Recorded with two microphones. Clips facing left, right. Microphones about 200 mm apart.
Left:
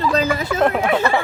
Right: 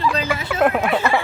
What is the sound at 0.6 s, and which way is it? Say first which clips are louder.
Speech: right 1 dB; 5° right (ahead or behind).